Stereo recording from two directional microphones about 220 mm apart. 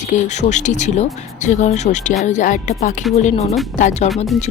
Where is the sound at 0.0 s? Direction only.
30° left (ahead or behind).